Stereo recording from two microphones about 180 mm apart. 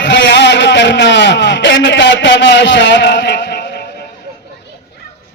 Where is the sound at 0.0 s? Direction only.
85° left; by 3.8 s 65° left (ahead or behind).